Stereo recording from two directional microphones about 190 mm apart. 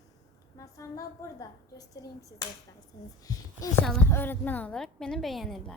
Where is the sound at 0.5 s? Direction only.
15° left (ahead or behind).